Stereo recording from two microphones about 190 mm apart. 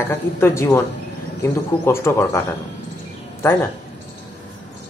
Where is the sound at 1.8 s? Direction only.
10° left (ahead or behind).